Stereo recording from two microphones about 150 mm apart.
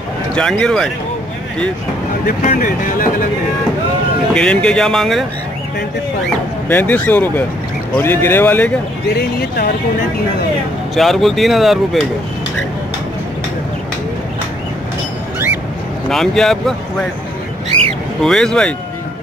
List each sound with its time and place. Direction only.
0.4 s speech: 5° left (ahead or behind)
2.2 s speech: 70° left (ahead or behind)
4.3 s speech: 5° left (ahead or behind)
6.7 s speech: 10° left (ahead or behind)
9.1 s speech: 90° left
11.0 s speech: centre (ahead or behind)
16.1 s speech: 5° left (ahead or behind)
18.2 s speech: 5° left (ahead or behind)